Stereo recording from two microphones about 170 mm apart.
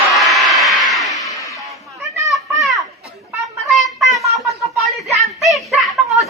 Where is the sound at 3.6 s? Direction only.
Centre (ahead or behind).